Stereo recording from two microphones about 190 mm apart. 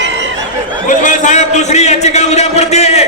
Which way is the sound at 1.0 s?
40° left (ahead or behind).